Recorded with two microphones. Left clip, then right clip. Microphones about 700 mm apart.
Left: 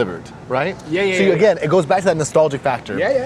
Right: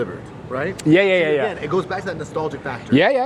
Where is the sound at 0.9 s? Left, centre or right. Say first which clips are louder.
Right 4 dB; right.